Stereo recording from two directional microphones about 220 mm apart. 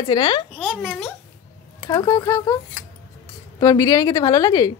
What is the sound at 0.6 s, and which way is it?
Speech, centre (ahead or behind).